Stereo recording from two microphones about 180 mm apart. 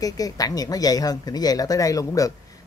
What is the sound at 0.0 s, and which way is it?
Speech, 20° left (ahead or behind).